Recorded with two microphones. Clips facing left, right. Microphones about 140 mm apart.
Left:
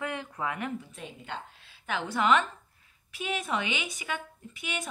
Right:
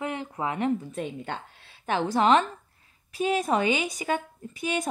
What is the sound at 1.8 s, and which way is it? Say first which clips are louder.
A woman's voice: right 6 dB; 40° right (ahead or behind).